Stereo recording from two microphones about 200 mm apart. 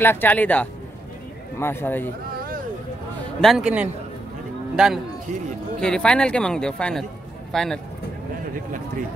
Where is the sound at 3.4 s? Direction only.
Centre (ahead or behind).